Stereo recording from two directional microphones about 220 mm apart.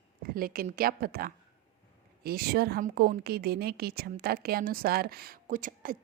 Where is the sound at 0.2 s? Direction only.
40° right (ahead or behind).